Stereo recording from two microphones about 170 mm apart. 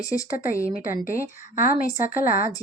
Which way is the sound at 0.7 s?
55° left (ahead or behind).